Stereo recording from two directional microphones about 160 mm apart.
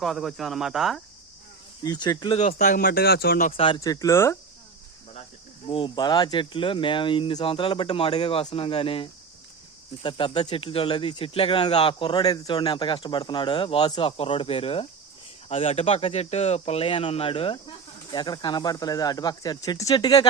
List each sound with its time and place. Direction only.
0.0 s speech: centre (ahead or behind)
1.8 s speech: 25° left (ahead or behind)
2.4 s speech: 50° left (ahead or behind)
2.8 s speech: 80° left
3.5 s speech: 35° left (ahead or behind)
3.8 s speech: 20° left (ahead or behind)
5.6 s speech: 35° left (ahead or behind)